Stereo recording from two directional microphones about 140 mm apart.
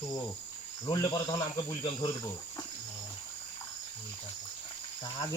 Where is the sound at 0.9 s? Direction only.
30° left (ahead or behind).